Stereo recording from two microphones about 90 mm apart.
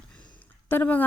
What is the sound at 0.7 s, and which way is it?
Speech, 20° left (ahead or behind).